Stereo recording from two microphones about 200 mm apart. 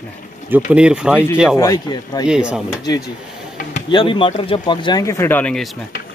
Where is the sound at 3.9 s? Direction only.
25° left (ahead or behind).